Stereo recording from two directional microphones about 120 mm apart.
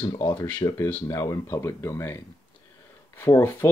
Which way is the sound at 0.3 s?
15° left (ahead or behind).